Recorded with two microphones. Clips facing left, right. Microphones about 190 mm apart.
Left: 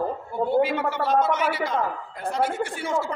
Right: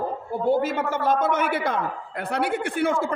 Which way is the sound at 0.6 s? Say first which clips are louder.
Left 2 dB; 45° right (ahead or behind).